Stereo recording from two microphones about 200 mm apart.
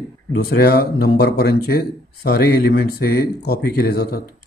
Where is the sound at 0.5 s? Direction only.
50° left (ahead or behind).